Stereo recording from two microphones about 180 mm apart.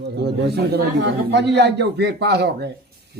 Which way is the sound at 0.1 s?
70° right (ahead or behind).